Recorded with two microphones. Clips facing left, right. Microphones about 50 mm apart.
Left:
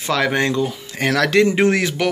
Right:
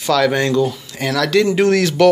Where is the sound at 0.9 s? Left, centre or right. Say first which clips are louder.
Left 1 dB; left.